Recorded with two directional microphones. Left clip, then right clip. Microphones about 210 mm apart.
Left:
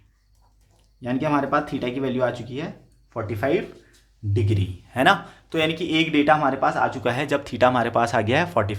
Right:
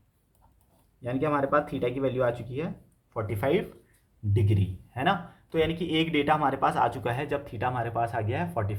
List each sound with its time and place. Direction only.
1.0 s a man's voice: 35° left (ahead or behind); by 4.7 s 10° left (ahead or behind)
4.9 s speech: 25° left (ahead or behind)